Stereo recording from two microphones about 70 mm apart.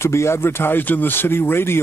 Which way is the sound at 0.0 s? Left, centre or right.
Left.